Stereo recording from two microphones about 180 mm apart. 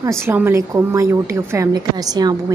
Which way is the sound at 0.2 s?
10° right (ahead or behind).